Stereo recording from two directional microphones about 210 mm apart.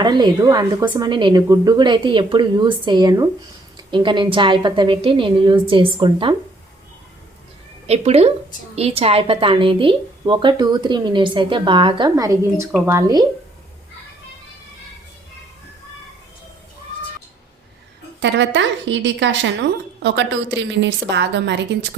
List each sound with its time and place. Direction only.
0.0 s a woman's voice: 20° right (ahead or behind)
7.9 s a woman's voice: 30° right (ahead or behind)
18.2 s a woman's voice: 60° right (ahead or behind)